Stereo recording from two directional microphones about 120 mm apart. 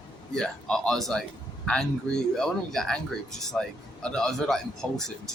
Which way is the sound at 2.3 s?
5° left (ahead or behind).